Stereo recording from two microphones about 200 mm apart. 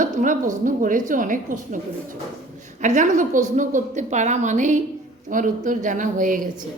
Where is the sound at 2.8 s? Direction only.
40° right (ahead or behind).